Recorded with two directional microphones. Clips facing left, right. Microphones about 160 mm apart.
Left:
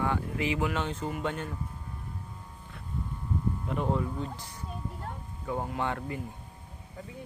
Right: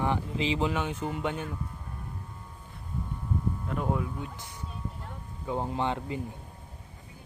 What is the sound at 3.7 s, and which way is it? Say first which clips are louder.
Speech: left 1 dB; 5° right (ahead or behind).